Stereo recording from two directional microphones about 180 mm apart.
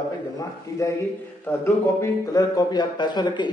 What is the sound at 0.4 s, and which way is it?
A man's voice, 15° left (ahead or behind).